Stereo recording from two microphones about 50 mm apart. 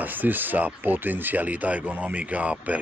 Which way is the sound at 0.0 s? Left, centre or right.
Right.